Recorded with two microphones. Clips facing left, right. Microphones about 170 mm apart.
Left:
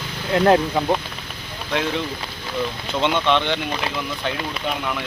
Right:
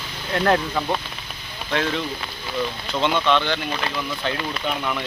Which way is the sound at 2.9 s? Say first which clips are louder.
Left 1 dB; 20° left (ahead or behind).